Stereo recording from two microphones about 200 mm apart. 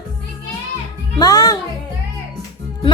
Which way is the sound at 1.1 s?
20° left (ahead or behind).